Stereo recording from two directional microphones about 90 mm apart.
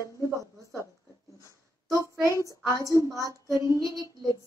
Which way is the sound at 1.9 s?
35° left (ahead or behind).